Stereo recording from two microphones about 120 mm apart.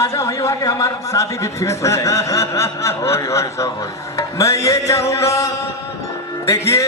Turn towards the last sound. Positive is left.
turn(degrees=25)  # may be behind; listen again after turning